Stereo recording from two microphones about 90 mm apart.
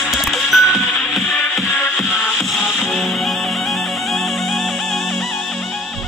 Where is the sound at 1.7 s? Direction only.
20° left (ahead or behind).